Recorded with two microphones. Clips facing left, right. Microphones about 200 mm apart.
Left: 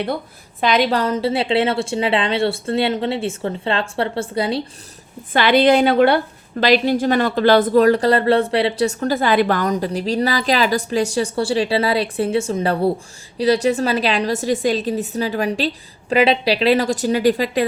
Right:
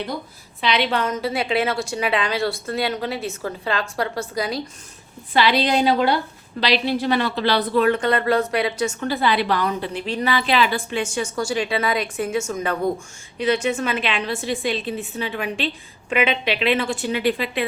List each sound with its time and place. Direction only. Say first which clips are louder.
0.6 s a woman's voice: left 4 dB; 45° left (ahead or behind)
5.3 s a woman's voice: left 5 dB; 55° left (ahead or behind)
6.6 s speech: left 5 dB; 45° left (ahead or behind)